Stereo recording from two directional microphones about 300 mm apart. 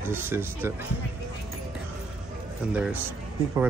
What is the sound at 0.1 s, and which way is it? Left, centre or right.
Speech, centre.